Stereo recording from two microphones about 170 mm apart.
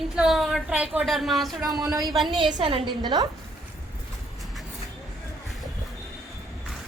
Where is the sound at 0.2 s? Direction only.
Centre (ahead or behind).